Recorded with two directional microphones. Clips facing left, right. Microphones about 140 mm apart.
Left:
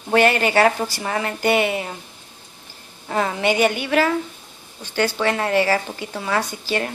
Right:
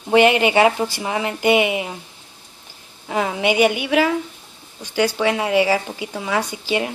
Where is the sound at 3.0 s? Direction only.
5° right (ahead or behind).